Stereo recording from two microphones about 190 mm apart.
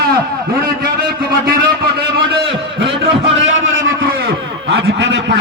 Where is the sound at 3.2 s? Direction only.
75° right (ahead or behind).